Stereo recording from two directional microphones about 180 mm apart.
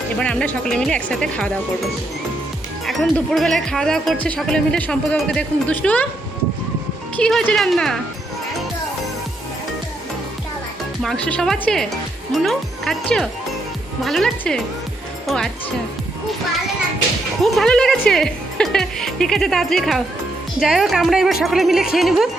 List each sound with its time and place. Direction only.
0.2 s speech: 5° left (ahead or behind)
2.8 s speech: centre (ahead or behind)
7.2 s speech: 5° left (ahead or behind)
11.0 s speech: 5° left (ahead or behind)
17.4 s a woman's voice: centre (ahead or behind)